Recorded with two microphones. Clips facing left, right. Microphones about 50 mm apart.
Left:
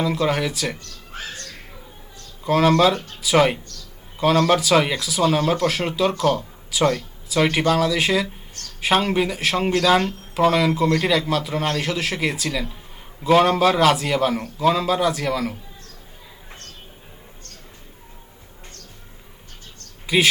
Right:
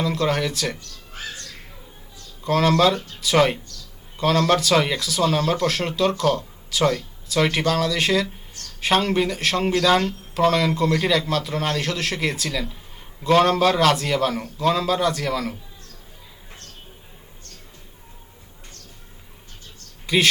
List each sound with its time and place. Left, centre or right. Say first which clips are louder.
0.0 s a man's voice: left 1 dB; centre
0.8 s music: left 2 dB; left
2.4 s a man's voice: left 2 dB; centre
20.1 s speech: left 1 dB; centre